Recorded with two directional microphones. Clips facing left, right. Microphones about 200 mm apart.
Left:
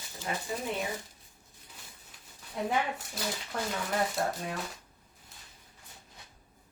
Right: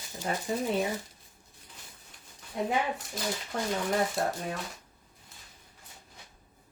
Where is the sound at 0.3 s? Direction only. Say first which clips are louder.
Right 3 dB; 40° right (ahead or behind).